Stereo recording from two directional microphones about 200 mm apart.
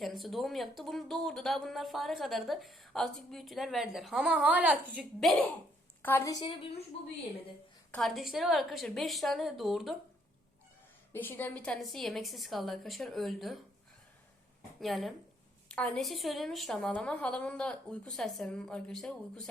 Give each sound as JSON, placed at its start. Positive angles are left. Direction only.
{"t": 0.0, "sound": "speech", "side_deg": 0}
{"t": 6.0, "sound": "a woman's voice", "side_deg": 10}
{"t": 6.4, "sound": "a woman's voice", "side_deg": 30}
{"t": 7.9, "sound": "speech", "side_deg": 0}
{"t": 11.1, "sound": "speech", "side_deg": 10}
{"t": 14.8, "sound": "speech", "side_deg": 0}